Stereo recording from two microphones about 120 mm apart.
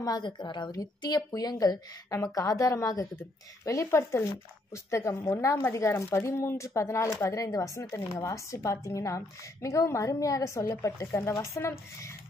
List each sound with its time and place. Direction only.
0.0 s a woman's voice: 35° left (ahead or behind)